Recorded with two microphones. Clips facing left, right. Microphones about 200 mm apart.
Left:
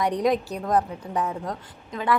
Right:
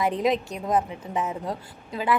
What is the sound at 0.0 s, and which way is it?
A woman's voice, 5° right (ahead or behind).